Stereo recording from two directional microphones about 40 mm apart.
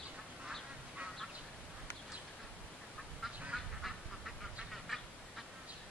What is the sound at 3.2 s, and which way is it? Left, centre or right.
Quack, centre.